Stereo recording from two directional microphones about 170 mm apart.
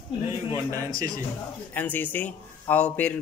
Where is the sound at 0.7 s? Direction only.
20° right (ahead or behind).